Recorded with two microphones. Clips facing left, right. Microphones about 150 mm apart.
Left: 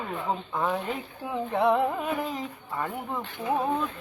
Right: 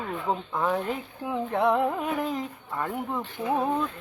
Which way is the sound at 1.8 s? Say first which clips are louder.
Right 1 dB; centre (ahead or behind).